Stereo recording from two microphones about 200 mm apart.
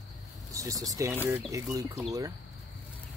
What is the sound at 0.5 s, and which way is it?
Speech, 15° right (ahead or behind).